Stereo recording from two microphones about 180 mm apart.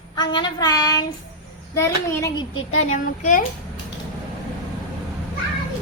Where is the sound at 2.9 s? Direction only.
45° left (ahead or behind).